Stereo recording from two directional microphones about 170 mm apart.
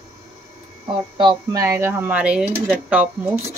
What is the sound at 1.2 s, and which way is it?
Speech, 30° right (ahead or behind).